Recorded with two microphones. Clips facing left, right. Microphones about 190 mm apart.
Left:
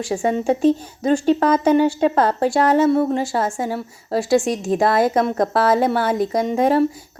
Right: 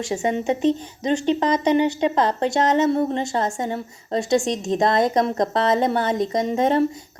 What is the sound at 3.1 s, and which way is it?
A woman's voice, 5° left (ahead or behind).